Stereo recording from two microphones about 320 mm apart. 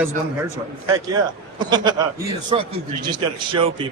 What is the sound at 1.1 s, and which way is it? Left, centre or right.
Speech, centre.